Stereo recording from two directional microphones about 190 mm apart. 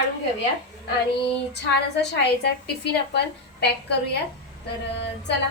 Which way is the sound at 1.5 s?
60° left (ahead or behind).